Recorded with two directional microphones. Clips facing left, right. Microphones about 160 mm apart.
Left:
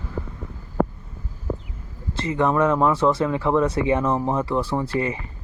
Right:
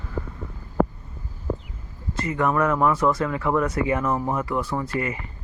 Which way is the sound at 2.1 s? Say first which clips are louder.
Left 2 dB; 30° left (ahead or behind).